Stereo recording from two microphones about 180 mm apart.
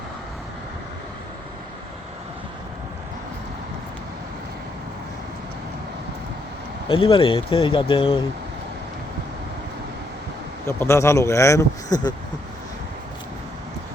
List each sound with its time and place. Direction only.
6.8 s speech: 30° left (ahead or behind)
10.7 s speech: 15° left (ahead or behind)